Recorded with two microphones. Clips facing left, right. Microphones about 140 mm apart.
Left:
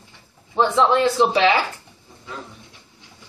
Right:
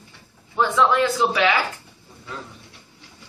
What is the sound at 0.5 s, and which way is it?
A man's voice, 25° left (ahead or behind).